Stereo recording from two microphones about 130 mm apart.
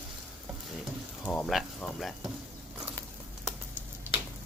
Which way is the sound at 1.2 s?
10° left (ahead or behind).